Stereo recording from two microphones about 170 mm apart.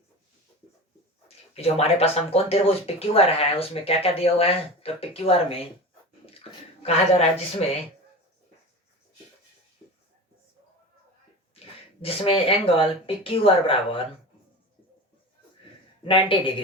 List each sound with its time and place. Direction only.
1.5 s speech: 35° left (ahead or behind)
12.0 s speech: 35° left (ahead or behind)
16.0 s speech: 30° left (ahead or behind)